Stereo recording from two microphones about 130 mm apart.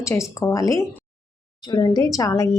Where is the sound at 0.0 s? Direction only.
25° left (ahead or behind).